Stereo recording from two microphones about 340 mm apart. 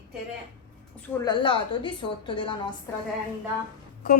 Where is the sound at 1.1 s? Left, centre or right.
Centre.